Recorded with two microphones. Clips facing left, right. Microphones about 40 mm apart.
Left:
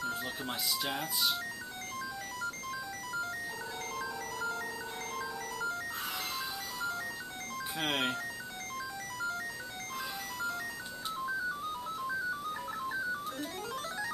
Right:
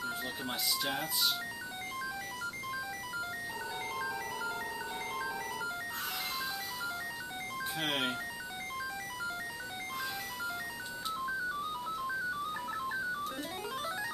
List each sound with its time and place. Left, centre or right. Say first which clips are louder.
0.0 s a child's voice: left 1 dB; centre
3.9 s music: right 1 dB; centre
5.1 s a sound: right 1 dB; centre
7.8 s speech: left 2 dB; centre
13.4 s music: even; centre